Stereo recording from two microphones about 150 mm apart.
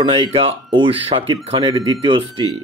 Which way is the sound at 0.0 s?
35° right (ahead or behind).